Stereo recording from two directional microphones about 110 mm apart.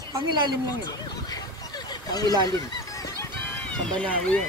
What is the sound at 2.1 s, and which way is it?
Speech, 35° left (ahead or behind).